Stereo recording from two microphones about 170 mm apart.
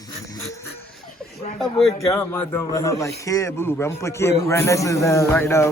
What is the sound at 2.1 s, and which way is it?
A man's voice, 15° left (ahead or behind).